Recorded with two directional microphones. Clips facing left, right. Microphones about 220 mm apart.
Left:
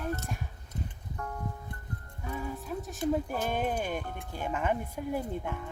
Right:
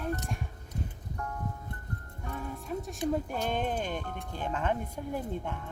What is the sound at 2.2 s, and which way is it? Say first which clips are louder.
Speech: left 1 dB; 5° left (ahead or behind).